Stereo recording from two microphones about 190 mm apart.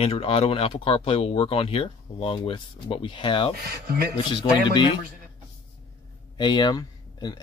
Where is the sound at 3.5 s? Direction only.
55° right (ahead or behind).